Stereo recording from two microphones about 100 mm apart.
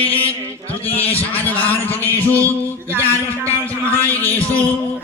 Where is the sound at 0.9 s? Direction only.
15° left (ahead or behind).